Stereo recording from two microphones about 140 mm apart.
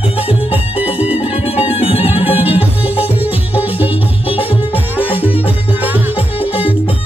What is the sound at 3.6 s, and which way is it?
Music, 45° left (ahead or behind).